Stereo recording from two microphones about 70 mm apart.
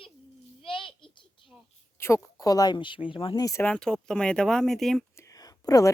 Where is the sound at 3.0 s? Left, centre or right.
Left.